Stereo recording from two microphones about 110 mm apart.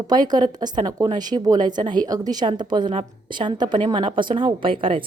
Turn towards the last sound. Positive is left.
turn(degrees=-50)  # may be behind; listen again after turning